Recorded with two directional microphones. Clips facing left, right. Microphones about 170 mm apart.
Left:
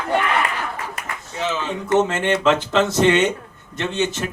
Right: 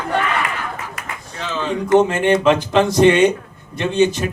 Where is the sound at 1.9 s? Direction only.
15° right (ahead or behind).